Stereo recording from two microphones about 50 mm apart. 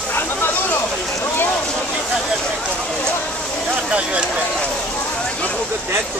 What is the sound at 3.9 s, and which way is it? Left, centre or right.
Speech, right.